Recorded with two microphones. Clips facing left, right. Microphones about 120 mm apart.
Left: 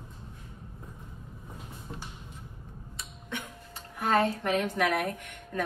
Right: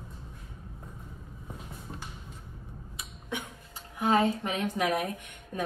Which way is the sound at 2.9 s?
15° right (ahead or behind).